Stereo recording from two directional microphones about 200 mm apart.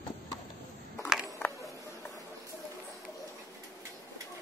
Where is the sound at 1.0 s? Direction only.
Centre (ahead or behind).